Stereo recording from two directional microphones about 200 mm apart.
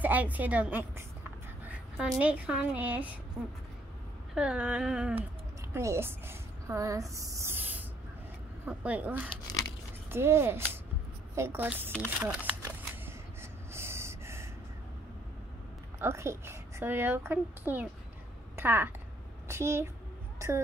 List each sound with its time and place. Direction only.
0.0 s a woman's voice: 10° right (ahead or behind)
4.4 s a woman's voice: 5° right (ahead or behind)
9.3 s speech: 20° left (ahead or behind)
10.1 s a woman's voice: 10° right (ahead or behind)
13.0 s snort: 10° right (ahead or behind)
16.0 s a woman's voice: 15° right (ahead or behind)
20.3 s a sound: 15° right (ahead or behind)